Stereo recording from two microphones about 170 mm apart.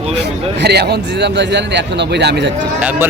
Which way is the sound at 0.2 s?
75° right (ahead or behind).